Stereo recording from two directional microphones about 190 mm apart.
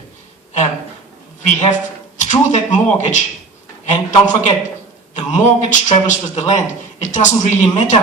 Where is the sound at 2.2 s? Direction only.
40° left (ahead or behind).